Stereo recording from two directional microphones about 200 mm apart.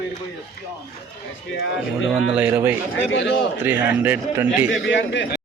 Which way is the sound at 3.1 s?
65° left (ahead or behind).